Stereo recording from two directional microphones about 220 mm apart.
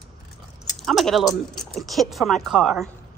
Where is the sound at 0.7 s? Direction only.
Centre (ahead or behind).